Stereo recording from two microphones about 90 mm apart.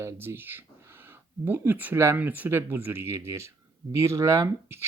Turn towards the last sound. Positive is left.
turn(degrees=-30)  # may be behind; listen again after turning